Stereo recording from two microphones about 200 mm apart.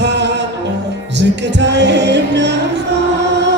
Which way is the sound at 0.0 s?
60° right (ahead or behind).